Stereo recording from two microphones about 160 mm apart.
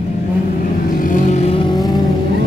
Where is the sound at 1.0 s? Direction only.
55° left (ahead or behind).